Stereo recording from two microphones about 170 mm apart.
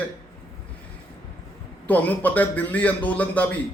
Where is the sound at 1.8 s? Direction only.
10° left (ahead or behind).